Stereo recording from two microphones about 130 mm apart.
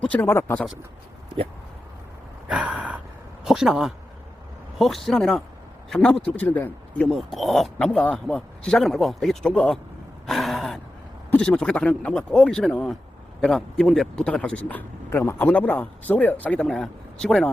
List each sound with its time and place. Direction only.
0.0 s speech: 10° left (ahead or behind)
2.5 s gasp: 10° right (ahead or behind)
3.4 s speech: 5° right (ahead or behind); by 7.1 s 15° left (ahead or behind)
7.1 s speech: centre (ahead or behind)
10.2 s gasp: centre (ahead or behind)
11.3 s speech: 10° left (ahead or behind)